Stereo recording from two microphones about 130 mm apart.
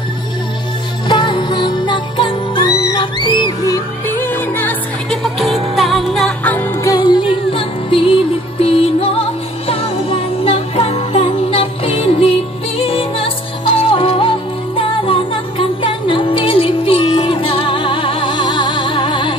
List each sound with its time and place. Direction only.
1.0 s music: 35° left (ahead or behind)
4.2 s music: 15° left (ahead or behind)
5.1 s music: centre (ahead or behind)
6.8 s music: 30° left (ahead or behind)